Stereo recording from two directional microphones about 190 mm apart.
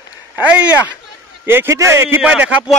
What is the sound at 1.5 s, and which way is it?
Speech, 15° right (ahead or behind).